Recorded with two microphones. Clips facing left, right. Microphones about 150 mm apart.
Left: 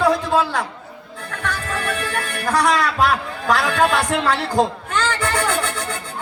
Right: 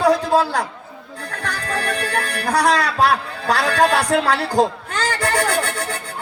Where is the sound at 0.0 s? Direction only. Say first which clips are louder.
Right 2 dB; 35° right (ahead or behind).